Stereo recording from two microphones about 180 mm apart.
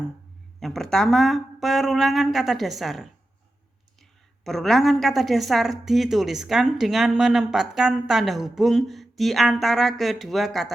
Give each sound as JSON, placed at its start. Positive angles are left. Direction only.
{"t": 0.6, "sound": "a woman's voice", "side_deg": 0}
{"t": 4.4, "sound": "a woman's voice", "side_deg": 0}